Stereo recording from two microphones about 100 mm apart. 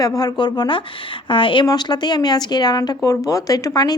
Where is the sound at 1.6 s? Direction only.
45° left (ahead or behind).